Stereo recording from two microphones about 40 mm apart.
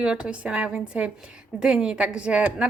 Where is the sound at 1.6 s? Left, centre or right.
Centre.